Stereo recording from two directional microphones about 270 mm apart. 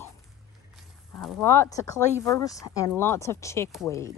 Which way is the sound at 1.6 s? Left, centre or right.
Centre.